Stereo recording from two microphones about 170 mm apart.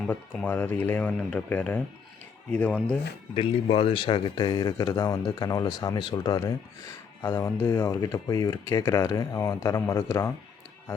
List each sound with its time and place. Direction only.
0.1 s speech: 10° left (ahead or behind)
3.3 s speech: 35° left (ahead or behind); by 10.3 s 20° left (ahead or behind)